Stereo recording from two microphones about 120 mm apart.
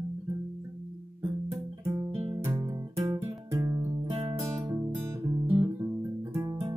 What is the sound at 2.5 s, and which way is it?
Music, 25° right (ahead or behind).